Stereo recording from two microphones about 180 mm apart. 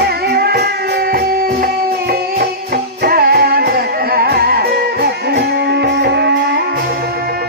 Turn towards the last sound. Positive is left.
turn(degrees=-70)  # may be behind; listen again after turning